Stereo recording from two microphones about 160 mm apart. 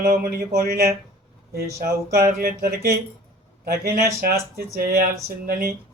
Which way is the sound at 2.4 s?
70° right (ahead or behind).